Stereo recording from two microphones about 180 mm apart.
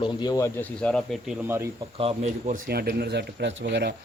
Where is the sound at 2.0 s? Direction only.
30° right (ahead or behind).